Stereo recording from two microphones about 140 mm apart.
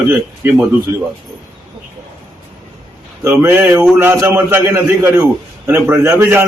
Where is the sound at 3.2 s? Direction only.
15° right (ahead or behind).